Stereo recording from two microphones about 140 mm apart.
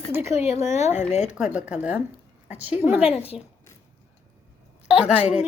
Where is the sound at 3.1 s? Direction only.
45° left (ahead or behind).